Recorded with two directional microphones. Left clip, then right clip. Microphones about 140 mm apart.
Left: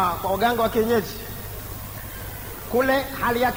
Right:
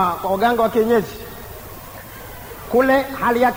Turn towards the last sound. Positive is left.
turn(degrees=50)  # may be behind; listen again after turning